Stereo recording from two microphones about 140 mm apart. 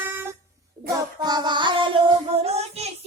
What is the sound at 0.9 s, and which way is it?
Child singing, 30° right (ahead or behind).